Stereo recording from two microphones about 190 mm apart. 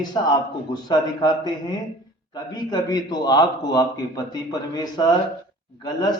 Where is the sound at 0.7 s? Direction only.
20° left (ahead or behind).